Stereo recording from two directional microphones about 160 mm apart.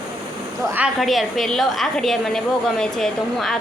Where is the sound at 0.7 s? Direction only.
5° right (ahead or behind).